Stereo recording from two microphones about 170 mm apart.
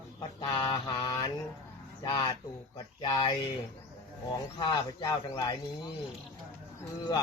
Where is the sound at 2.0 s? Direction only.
20° left (ahead or behind).